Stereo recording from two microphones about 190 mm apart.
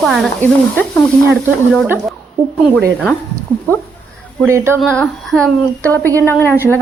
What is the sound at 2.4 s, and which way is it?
Speech, 25° right (ahead or behind).